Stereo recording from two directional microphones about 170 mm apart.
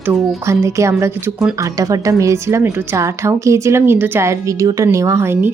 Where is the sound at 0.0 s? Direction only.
15° right (ahead or behind).